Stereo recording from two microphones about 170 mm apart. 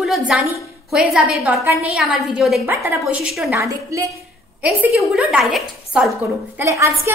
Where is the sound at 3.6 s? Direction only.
20° right (ahead or behind).